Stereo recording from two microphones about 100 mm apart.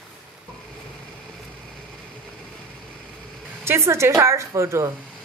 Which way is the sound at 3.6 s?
25° right (ahead or behind).